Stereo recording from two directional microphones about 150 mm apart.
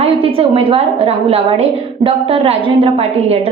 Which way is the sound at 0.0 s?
40° right (ahead or behind).